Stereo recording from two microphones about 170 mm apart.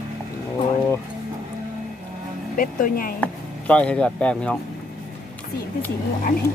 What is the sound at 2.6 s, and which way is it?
Speech, 55° left (ahead or behind).